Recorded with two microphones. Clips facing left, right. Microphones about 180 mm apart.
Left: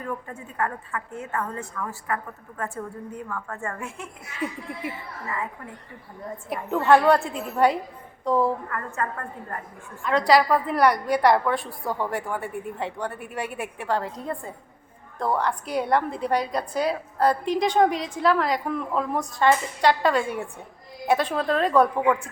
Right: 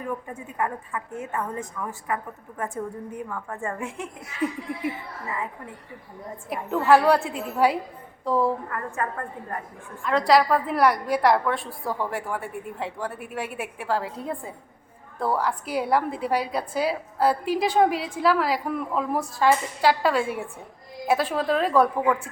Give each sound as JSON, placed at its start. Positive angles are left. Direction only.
{"t": 0.0, "sound": "a woman's voice", "side_deg": -15}
{"t": 6.5, "sound": "a woman's voice", "side_deg": 0}
{"t": 10.0, "sound": "a woman's voice", "side_deg": 0}